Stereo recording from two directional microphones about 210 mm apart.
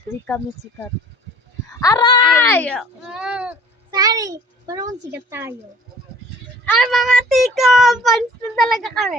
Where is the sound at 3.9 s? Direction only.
15° right (ahead or behind).